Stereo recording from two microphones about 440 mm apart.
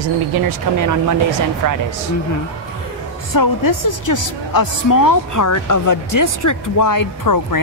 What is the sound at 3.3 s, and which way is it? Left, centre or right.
A woman's voice, left.